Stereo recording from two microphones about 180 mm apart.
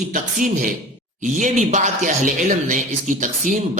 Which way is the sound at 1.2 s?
40° right (ahead or behind).